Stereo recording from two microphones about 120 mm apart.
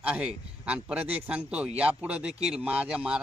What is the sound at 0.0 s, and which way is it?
A man's voice, 10° right (ahead or behind).